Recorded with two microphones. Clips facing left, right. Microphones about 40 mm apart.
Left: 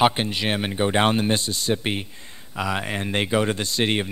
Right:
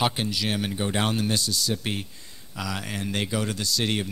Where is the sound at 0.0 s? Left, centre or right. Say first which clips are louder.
Left 6 dB; left.